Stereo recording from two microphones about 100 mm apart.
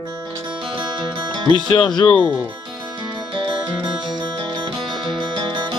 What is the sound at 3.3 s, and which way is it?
Music, 50° right (ahead or behind).